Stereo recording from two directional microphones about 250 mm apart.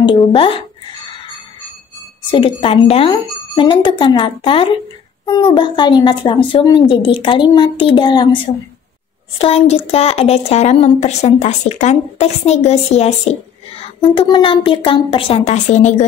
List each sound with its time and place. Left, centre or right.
0.0 s a woman's voice: centre
2.3 s a woman's voice: centre
9.4 s a woman's voice: left